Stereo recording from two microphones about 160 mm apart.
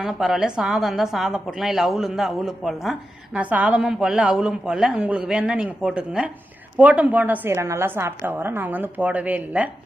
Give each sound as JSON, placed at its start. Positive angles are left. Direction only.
{"t": 0.0, "sound": "a woman's voice", "side_deg": -5}